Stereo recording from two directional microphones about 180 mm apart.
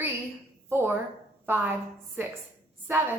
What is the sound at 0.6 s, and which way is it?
A woman's voice, 10° right (ahead or behind).